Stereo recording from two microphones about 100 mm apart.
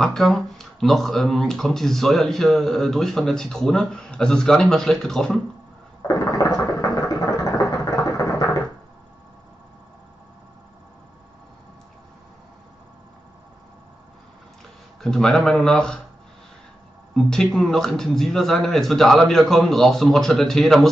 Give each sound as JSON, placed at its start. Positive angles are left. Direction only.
{"t": 0.0, "sound": "speech", "side_deg": 5}
{"t": 6.0, "sound": "a sound", "side_deg": 35}
{"t": 15.0, "sound": "speech", "side_deg": 5}
{"t": 17.1, "sound": "speech", "side_deg": 5}